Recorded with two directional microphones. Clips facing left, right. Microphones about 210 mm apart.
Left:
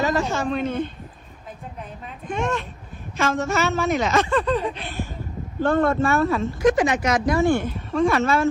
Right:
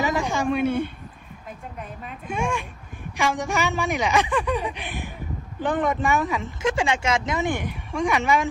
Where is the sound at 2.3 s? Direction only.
10° right (ahead or behind).